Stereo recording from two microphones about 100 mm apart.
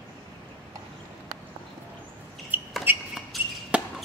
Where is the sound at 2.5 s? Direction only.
20° right (ahead or behind).